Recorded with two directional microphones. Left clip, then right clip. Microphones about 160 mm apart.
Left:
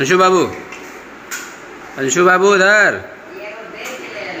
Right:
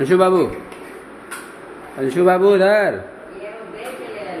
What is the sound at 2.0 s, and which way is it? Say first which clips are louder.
Speech: left 3 dB; 10° right (ahead or behind).